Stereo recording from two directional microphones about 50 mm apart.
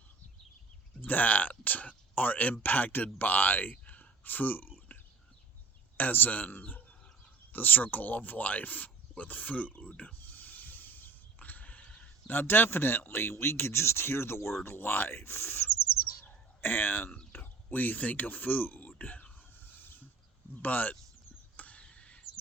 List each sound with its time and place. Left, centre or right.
1.0 s speech: left
6.0 s speech: left
10.2 s neigh: left
12.3 s speech: left
14.6 s speech: left
19.5 s a sound: left
20.6 s speech: left
21.5 s a sound: left